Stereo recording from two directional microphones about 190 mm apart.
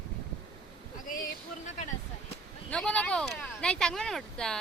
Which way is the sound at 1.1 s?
45° left (ahead or behind).